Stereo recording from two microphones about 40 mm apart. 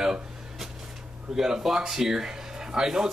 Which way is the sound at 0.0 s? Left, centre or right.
Centre.